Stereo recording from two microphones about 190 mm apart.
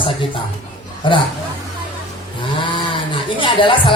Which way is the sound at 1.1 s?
25° left (ahead or behind).